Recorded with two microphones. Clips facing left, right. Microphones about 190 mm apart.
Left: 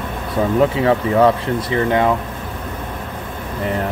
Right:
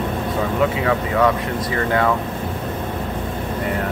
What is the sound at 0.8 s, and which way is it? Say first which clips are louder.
Speech: left 5 dB; 30° left (ahead or behind).